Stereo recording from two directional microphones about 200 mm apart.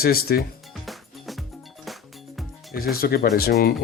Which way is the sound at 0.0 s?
50° left (ahead or behind).